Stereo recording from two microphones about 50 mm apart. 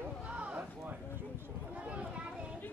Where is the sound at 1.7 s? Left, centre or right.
Right.